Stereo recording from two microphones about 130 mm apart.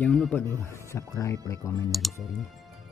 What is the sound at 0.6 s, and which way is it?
Speech, 20° left (ahead or behind).